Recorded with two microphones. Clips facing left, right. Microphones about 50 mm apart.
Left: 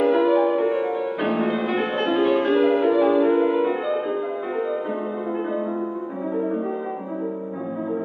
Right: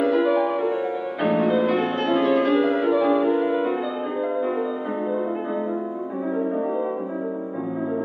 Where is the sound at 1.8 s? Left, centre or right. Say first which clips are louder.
Even; centre.